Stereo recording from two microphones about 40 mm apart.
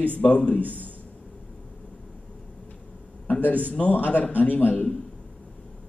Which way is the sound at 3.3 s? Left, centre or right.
Left.